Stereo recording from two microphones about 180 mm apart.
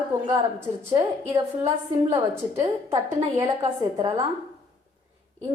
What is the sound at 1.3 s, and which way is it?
A woman's voice, 15° right (ahead or behind).